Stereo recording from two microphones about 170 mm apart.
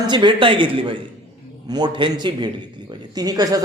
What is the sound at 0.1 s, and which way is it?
A man's voice, 30° right (ahead or behind).